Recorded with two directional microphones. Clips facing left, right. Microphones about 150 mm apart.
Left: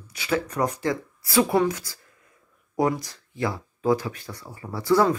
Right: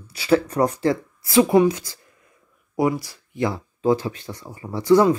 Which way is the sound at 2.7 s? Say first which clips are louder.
Right 2 dB; 10° right (ahead or behind).